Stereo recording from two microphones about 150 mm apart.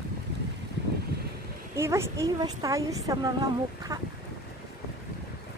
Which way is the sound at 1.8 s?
15° right (ahead or behind).